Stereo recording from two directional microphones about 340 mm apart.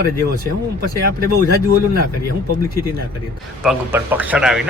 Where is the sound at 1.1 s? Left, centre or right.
Right.